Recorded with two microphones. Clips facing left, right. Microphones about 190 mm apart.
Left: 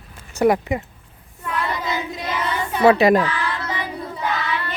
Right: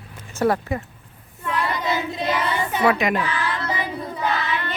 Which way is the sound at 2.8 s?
35° left (ahead or behind).